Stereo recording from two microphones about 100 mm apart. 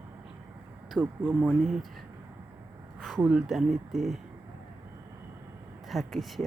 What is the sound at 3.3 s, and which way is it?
Speech, 5° right (ahead or behind).